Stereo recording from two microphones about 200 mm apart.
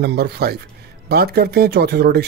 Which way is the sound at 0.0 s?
55° right (ahead or behind).